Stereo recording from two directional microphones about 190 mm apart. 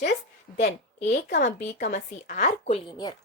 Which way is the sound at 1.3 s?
40° left (ahead or behind).